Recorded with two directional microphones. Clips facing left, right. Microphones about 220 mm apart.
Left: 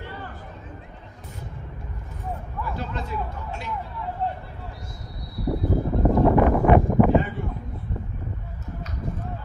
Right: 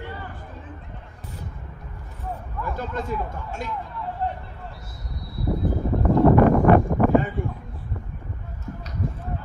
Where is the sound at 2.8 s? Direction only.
45° right (ahead or behind).